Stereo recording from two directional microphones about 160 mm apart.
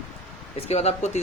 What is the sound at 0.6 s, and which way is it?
Speech, 40° left (ahead or behind).